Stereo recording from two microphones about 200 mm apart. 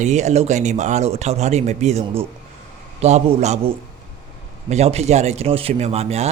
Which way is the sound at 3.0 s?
35° right (ahead or behind).